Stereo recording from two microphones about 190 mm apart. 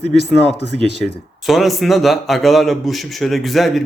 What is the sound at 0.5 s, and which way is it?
Speech, 60° left (ahead or behind).